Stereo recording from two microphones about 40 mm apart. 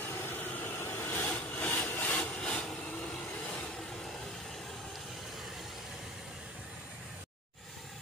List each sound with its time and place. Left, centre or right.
0.0 s vehicle: left
0.5 s vehicle: left
0.7 s a sound: left
1.4 s sawing: left
2.4 s vehicle: left